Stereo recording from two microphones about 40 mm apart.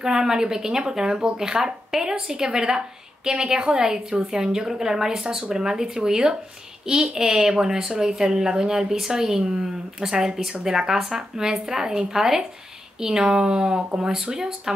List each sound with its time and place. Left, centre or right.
0.0 s a woman's voice: centre